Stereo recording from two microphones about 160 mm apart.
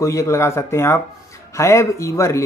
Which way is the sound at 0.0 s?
20° left (ahead or behind).